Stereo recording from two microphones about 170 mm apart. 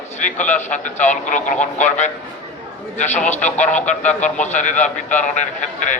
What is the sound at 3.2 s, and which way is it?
A man's voice, 45° left (ahead or behind).